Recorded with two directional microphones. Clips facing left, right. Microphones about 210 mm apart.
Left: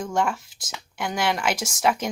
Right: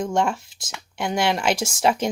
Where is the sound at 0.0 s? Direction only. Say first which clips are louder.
Right 3 dB; 25° right (ahead or behind).